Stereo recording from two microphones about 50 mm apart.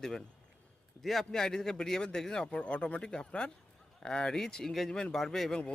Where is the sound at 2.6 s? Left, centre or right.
Left.